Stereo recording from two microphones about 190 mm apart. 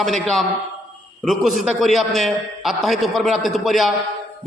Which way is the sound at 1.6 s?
Centre (ahead or behind).